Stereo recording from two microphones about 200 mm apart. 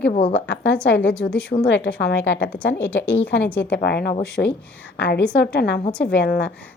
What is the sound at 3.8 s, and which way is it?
Speech, 55° left (ahead or behind).